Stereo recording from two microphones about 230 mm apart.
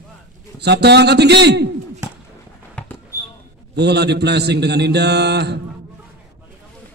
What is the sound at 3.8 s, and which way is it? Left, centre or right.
A man's voice, right.